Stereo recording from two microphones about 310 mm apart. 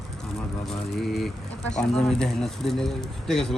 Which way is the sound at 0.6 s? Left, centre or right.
Centre.